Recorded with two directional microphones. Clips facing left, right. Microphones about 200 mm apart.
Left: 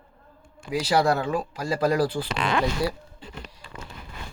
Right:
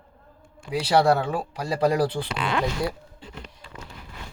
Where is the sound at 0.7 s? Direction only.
30° right (ahead or behind).